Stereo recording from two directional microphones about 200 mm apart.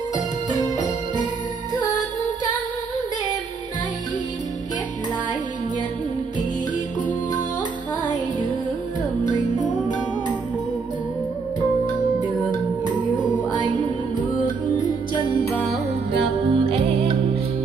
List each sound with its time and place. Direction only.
16.4 s music: 25° right (ahead or behind)